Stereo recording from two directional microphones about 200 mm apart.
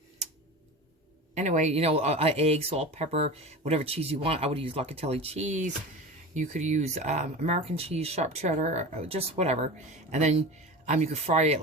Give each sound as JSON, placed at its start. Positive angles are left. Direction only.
{"t": 1.4, "sound": "speech", "side_deg": -35}